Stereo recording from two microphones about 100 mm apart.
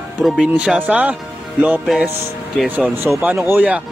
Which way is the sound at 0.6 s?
15° right (ahead or behind).